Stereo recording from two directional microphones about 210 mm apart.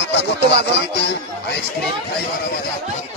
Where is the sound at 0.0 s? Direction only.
55° left (ahead or behind).